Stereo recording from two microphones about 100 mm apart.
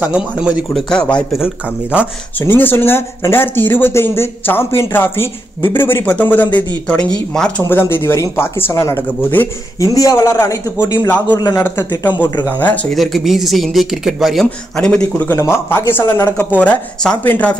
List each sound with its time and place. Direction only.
0.0 s speech: 15° right (ahead or behind)
0.7 s speech: 10° left (ahead or behind)
1.4 s speech: 10° right (ahead or behind)
2.3 s speech: 20° left (ahead or behind)
7.6 s speech: 25° left (ahead or behind)
9.8 s a man's voice: 35° left (ahead or behind)
12.4 s speech: 15° left (ahead or behind)
12.9 s speech: centre (ahead or behind)
15.2 s speech: 25° left (ahead or behind)
16.3 s speech: 15° left (ahead or behind)